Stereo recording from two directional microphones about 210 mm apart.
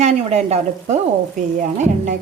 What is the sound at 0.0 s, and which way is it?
Speech, 30° right (ahead or behind).